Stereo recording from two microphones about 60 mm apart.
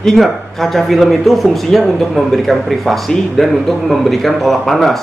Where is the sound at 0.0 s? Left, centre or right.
Centre.